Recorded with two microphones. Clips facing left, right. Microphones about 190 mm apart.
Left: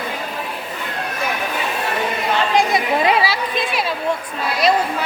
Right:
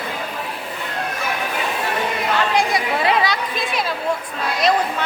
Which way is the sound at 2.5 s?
20° left (ahead or behind).